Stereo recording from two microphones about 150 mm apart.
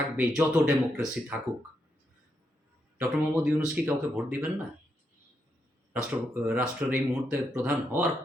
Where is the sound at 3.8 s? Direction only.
10° right (ahead or behind).